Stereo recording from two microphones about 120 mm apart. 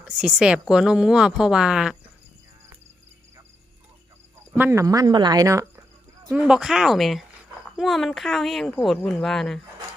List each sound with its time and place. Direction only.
0.2 s speech: 5° right (ahead or behind)
4.5 s speech: 20° right (ahead or behind)
6.3 s speech: 5° right (ahead or behind)